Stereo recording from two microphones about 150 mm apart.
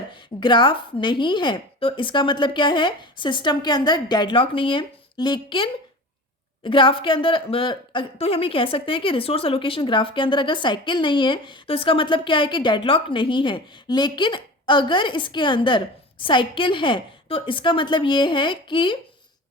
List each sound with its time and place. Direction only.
0.1 s a woman's voice: 30° left (ahead or behind)